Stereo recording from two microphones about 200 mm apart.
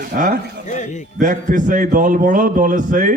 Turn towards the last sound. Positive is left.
turn(degrees=-40)  # may be behind; listen again after turning